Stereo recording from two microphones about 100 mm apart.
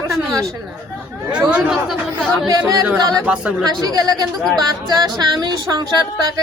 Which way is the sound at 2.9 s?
40° right (ahead or behind).